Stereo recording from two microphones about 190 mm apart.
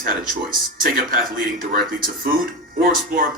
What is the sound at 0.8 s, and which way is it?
Speech, 50° right (ahead or behind).